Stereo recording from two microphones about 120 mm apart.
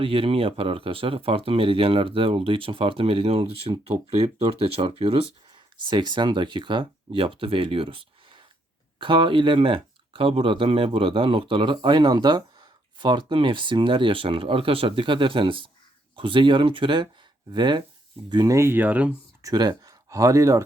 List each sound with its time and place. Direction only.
0.0 s speech: 50° right (ahead or behind)
5.8 s speech: 40° right (ahead or behind)
18.5 s speech: 20° right (ahead or behind)
19.4 s speech: 30° right (ahead or behind)